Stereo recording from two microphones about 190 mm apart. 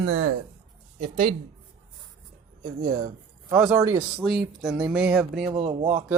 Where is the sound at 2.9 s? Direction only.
45° right (ahead or behind).